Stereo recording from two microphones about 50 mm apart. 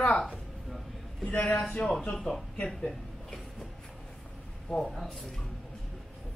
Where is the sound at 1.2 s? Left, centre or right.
Left; by 3.4 s centre.